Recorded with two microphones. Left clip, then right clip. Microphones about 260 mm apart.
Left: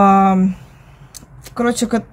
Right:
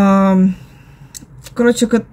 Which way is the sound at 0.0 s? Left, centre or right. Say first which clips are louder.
Left 2 dB; centre.